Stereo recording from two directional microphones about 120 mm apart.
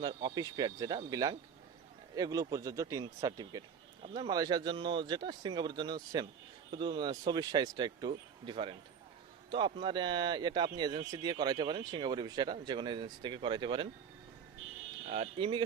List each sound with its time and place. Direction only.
0.0 s speech: 40° right (ahead or behind)
15.0 s speech: 60° right (ahead or behind)
15.4 s speech: 45° right (ahead or behind)